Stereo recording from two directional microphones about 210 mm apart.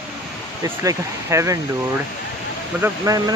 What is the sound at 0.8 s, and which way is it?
Speech, 15° right (ahead or behind).